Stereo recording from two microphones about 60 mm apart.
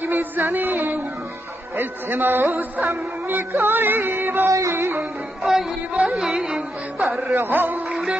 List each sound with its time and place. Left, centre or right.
0.0 s music: right
1.8 s a man's voice: right
2.4 s music: right
2.9 s music: right
4.5 s music: right
5.4 s music: centre
7.4 s a man's voice: right
7.9 s music: centre